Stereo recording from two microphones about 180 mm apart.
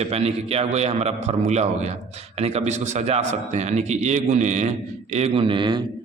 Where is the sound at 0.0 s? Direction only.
35° right (ahead or behind).